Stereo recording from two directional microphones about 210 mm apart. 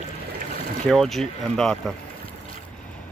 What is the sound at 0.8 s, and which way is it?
Speech, centre (ahead or behind).